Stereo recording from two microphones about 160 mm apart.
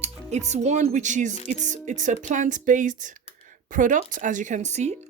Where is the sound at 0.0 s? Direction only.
45° right (ahead or behind).